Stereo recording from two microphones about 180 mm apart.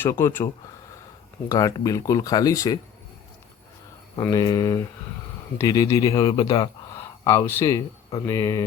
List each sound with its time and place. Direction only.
0.0 s speech: 15° left (ahead or behind)
1.5 s speech: 20° left (ahead or behind)
4.2 s speech: 20° left (ahead or behind)
7.3 s speech: 15° left (ahead or behind)